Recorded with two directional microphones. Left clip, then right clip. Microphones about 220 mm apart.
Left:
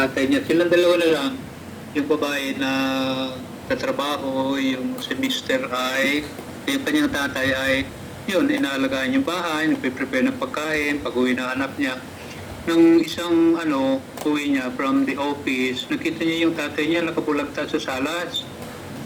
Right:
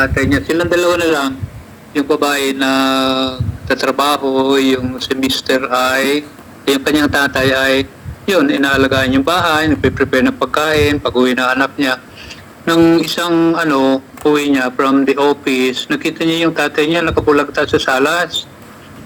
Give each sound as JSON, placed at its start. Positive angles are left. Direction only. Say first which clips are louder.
{"t": 0.3, "sound": "mantra", "louder": "right 4 dB", "side_deg": -35}
{"t": 8.3, "sound": "speech", "louder": "right 9 dB", "side_deg": -40}